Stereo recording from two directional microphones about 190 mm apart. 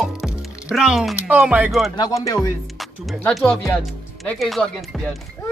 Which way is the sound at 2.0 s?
15° left (ahead or behind).